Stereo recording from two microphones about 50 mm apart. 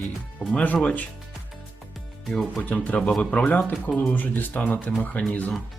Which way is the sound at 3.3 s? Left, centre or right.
Left.